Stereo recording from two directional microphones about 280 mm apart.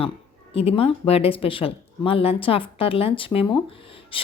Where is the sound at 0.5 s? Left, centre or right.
Left.